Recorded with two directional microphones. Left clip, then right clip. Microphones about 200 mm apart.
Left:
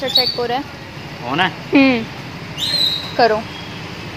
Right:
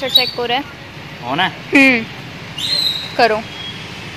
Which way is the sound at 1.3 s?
40° right (ahead or behind).